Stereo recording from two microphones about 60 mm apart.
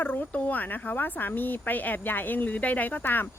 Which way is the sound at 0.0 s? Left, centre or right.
Left.